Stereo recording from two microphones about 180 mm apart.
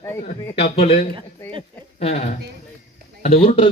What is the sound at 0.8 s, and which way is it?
A man's voice, 35° left (ahead or behind).